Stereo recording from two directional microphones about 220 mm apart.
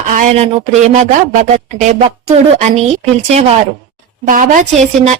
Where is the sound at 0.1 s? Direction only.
30° right (ahead or behind).